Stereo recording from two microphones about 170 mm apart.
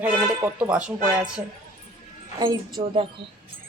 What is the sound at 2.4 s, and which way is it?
Speech, 25° right (ahead or behind).